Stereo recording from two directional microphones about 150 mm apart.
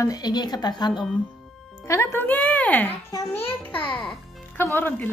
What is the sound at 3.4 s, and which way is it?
Music, 10° left (ahead or behind).